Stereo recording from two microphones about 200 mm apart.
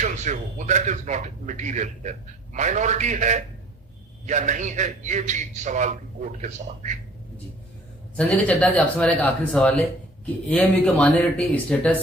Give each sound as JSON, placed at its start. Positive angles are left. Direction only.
{"t": 0.0, "sound": "a man's voice", "side_deg": -35}
{"t": 8.1, "sound": "speech", "side_deg": 5}